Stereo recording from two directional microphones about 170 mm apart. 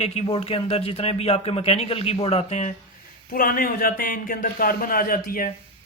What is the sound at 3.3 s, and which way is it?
Speech, 60° left (ahead or behind).